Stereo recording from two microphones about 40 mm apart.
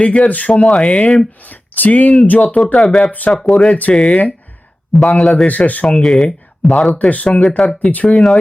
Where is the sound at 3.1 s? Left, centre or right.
Left.